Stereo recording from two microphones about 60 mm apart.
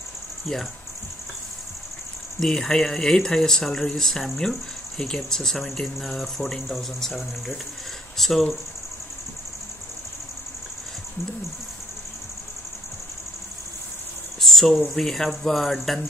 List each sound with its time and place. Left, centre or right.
0.5 s speech: centre
2.4 s speech: centre
14.4 s a sound: centre
14.9 s speech: centre